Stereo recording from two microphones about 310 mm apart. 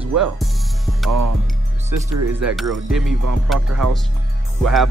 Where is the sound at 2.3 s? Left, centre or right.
Centre.